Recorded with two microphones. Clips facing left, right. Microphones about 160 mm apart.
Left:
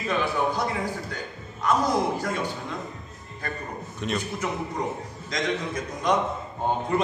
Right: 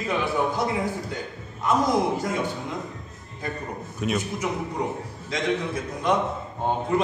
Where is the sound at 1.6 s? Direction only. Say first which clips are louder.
Right 1 dB; 20° right (ahead or behind).